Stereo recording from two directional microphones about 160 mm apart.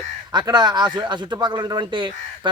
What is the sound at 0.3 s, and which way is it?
Speech, 25° right (ahead or behind).